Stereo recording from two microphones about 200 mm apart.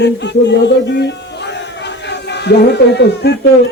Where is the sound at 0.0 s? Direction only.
60° left (ahead or behind).